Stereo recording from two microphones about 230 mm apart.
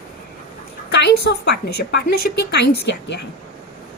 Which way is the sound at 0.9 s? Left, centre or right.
Left.